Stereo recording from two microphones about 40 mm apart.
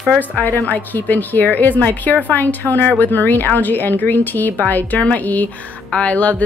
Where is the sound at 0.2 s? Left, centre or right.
Left.